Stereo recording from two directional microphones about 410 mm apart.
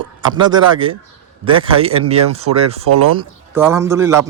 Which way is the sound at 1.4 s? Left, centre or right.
Centre.